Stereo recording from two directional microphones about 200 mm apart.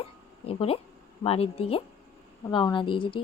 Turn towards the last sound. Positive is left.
turn(degrees=25)  # may be behind; listen again after turning